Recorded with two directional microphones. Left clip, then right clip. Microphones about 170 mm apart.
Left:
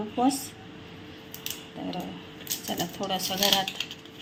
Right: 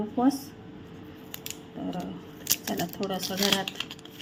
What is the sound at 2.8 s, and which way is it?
Speech, 30° right (ahead or behind).